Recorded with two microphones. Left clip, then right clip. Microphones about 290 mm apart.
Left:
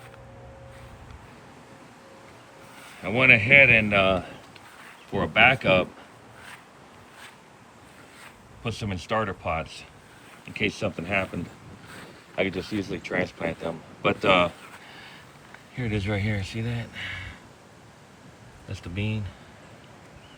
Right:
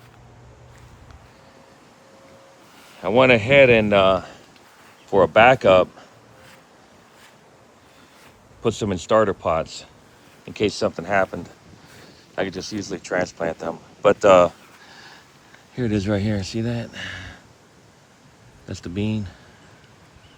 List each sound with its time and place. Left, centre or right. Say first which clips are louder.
3.0 s speech: right 3 dB; centre
8.6 s speech: right 10 dB; centre
12.4 s speech: right 1 dB; centre
14.3 s speech: right 7 dB; right
14.9 s a sound: right 1 dB; centre
15.9 s speech: right 5 dB; centre
18.7 s speech: right 6 dB; centre